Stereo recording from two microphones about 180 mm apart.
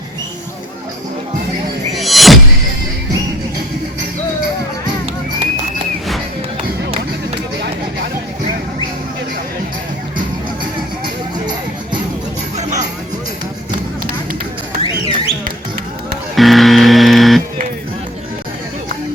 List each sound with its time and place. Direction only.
2.0 s music: centre (ahead or behind)
14.8 s a sound: 35° left (ahead or behind)
16.3 s buzzer: centre (ahead or behind)